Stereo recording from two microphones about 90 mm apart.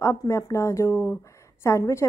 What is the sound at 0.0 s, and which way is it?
A woman's voice, 30° left (ahead or behind).